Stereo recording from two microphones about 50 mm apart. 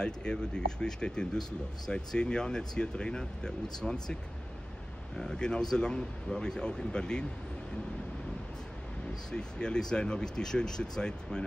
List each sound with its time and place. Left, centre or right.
0.0 s speech: centre
9.3 s speech: centre